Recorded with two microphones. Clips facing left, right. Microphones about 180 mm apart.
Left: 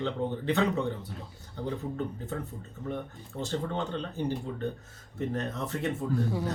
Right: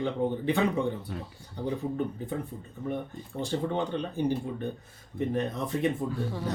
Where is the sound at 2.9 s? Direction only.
15° right (ahead or behind).